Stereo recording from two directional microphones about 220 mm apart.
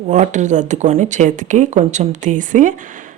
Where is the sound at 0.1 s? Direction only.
35° right (ahead or behind).